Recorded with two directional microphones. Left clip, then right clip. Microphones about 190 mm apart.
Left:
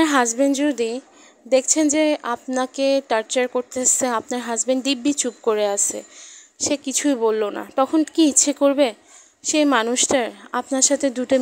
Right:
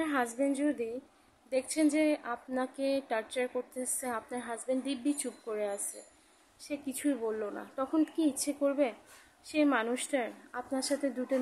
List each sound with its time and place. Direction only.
0.0 s a woman's voice: 50° left (ahead or behind)